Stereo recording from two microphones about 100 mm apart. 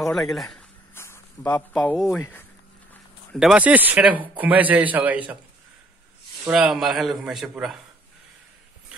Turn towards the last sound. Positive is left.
turn(degrees=-5)  # may be behind; listen again after turning